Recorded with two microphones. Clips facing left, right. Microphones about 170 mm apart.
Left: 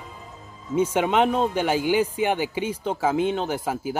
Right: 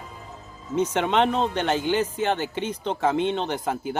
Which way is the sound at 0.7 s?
10° left (ahead or behind).